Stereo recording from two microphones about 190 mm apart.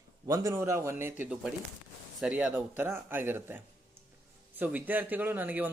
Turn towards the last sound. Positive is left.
turn(degrees=-10)  # may be behind; listen again after turning